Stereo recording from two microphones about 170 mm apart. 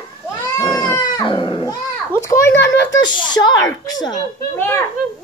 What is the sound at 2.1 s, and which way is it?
Speech, 15° left (ahead or behind).